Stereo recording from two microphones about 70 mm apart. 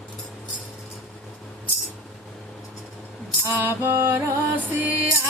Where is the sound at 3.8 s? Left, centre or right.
Right.